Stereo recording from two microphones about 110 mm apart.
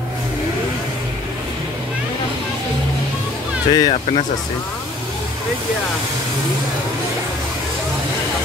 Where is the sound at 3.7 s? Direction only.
45° left (ahead or behind).